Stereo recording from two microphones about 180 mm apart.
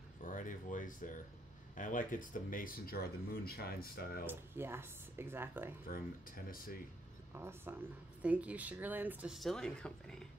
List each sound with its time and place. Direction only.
0.2 s speech: 45° left (ahead or behind)
4.3 s speech: 15° right (ahead or behind)
5.9 s speech: 55° left (ahead or behind)
7.3 s speech: 10° right (ahead or behind); by 10.2 s 5° left (ahead or behind)